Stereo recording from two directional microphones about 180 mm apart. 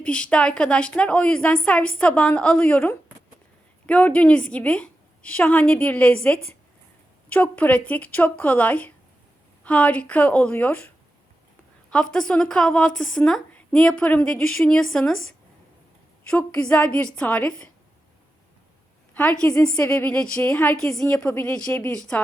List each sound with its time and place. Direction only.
0.0 s a woman's voice: 5° left (ahead or behind)
12.3 s a woman's voice: 5° left (ahead or behind)
16.4 s a woman's voice: 5° left (ahead or behind)
19.1 s a woman's voice: 5° left (ahead or behind)